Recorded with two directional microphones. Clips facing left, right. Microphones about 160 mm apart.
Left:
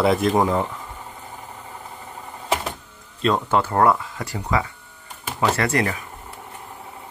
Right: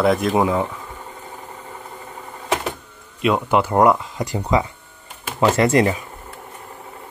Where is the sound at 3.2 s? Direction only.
10° right (ahead or behind).